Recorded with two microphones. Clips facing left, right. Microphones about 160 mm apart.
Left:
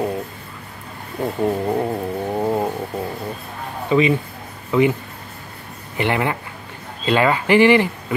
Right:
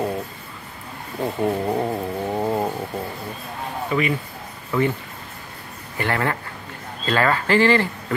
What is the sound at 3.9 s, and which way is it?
Speech, 20° left (ahead or behind).